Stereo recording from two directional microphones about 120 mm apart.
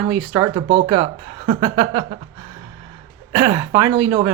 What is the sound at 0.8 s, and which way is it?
Speech, 50° right (ahead or behind).